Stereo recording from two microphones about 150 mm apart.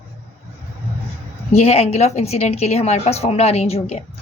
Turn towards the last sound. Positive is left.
turn(degrees=45)  # may be behind; listen again after turning